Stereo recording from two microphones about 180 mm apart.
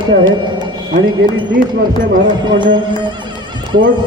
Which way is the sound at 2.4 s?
25° right (ahead or behind).